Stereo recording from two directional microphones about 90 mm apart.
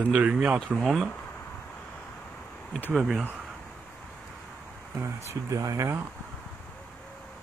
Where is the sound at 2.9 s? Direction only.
10° right (ahead or behind).